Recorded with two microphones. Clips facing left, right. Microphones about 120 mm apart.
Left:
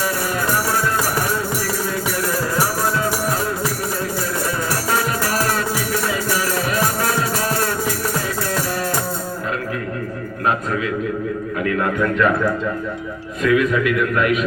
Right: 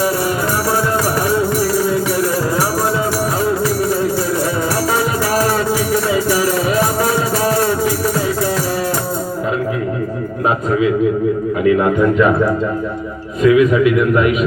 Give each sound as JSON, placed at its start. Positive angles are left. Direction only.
{"t": 6.3, "sound": "music", "side_deg": -15}
{"t": 10.7, "sound": "a sound", "side_deg": -15}
{"t": 11.6, "sound": "a man's voice", "side_deg": -15}